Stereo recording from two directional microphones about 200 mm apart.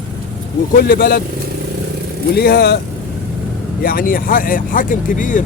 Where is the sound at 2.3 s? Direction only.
55° left (ahead or behind).